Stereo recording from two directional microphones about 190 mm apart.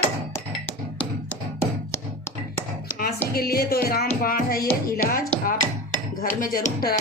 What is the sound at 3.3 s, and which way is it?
Music, 55° left (ahead or behind).